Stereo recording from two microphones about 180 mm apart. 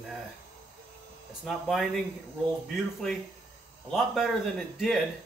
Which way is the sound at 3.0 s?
Centre (ahead or behind).